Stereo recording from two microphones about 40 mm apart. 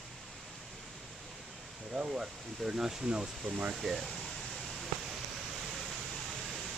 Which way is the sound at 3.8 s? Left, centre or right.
Centre.